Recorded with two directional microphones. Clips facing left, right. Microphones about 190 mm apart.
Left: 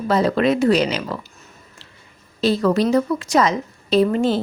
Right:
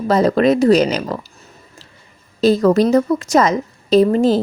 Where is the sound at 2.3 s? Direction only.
45° right (ahead or behind).